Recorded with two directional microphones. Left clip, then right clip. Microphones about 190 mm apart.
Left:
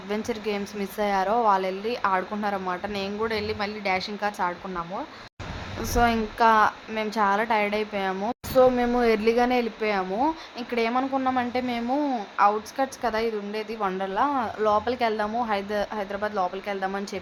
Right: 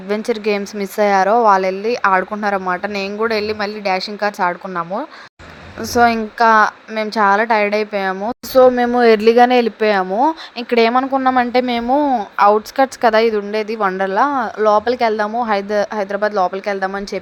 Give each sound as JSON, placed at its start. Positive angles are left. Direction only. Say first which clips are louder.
{"t": 0.1, "sound": "a woman's voice", "louder": "right 11 dB", "side_deg": -35}
{"t": 8.1, "sound": "a woman's voice", "louder": "right 7 dB", "side_deg": -20}
{"t": 8.5, "sound": "a woman's voice", "louder": "right 9 dB", "side_deg": -30}